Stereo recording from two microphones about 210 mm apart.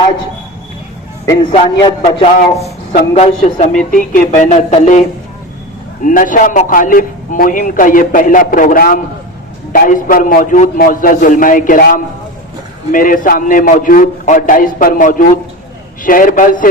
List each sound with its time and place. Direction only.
1.2 s a man's voice: 15° left (ahead or behind)
1.5 s a man's voice: 25° left (ahead or behind)